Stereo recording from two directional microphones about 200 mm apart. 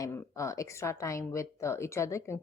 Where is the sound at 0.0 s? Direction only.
15° left (ahead or behind).